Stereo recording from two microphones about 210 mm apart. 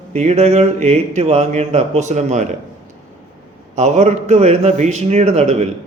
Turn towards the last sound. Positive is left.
turn(degrees=-30)  # may be behind; listen again after turning